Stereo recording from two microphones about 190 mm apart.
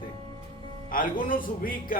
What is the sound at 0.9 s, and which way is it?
A man's voice, 45° left (ahead or behind).